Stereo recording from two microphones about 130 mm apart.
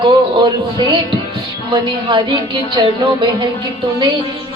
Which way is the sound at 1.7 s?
40° right (ahead or behind).